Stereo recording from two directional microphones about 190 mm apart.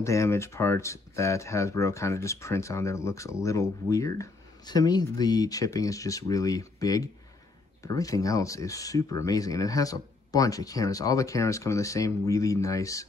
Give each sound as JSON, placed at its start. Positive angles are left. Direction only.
{"t": 0.0, "sound": "speech", "side_deg": 15}